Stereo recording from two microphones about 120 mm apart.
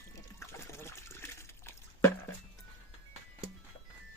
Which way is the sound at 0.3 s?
25° left (ahead or behind).